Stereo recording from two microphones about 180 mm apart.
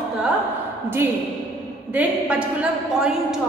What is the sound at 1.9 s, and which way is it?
A woman's voice, 5° right (ahead or behind).